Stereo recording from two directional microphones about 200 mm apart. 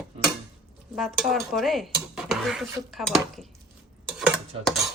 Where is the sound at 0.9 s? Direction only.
Centre (ahead or behind).